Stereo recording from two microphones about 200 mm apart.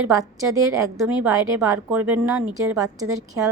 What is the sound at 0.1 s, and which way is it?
A woman's voice, 15° right (ahead or behind).